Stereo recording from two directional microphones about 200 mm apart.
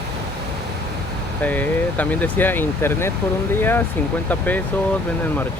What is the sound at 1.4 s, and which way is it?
Speech, 10° left (ahead or behind).